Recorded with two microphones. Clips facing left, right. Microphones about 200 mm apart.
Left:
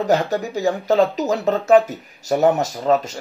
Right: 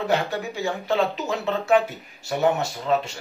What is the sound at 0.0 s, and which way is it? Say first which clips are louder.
Speech: left 5 dB; 40° left (ahead or behind).